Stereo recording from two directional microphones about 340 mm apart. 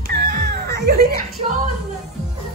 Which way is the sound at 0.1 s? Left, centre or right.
Right.